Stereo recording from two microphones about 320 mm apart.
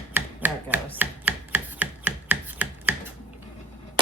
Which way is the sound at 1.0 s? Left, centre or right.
Centre.